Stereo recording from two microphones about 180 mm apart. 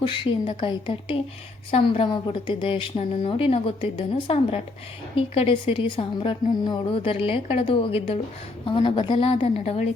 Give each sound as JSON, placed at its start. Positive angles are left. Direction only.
{"t": 0.1, "sound": "a woman's voice", "side_deg": 25}